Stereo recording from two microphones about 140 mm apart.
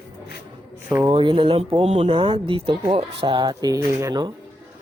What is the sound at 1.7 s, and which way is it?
Speech, 50° right (ahead or behind).